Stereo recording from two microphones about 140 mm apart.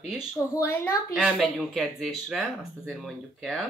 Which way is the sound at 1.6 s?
Centre (ahead or behind).